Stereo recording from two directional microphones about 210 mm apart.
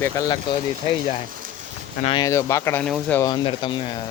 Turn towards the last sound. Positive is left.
turn(degrees=25)  # may be behind; listen again after turning